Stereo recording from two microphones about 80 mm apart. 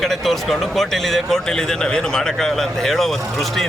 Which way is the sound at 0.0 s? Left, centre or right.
Centre.